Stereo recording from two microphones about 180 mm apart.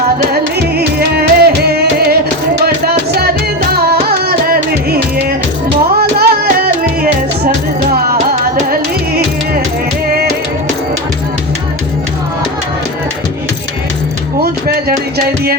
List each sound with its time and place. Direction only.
0.8 s music: 60° right (ahead or behind)
6.0 s music: 60° right (ahead or behind)
8.3 s music: 55° right (ahead or behind)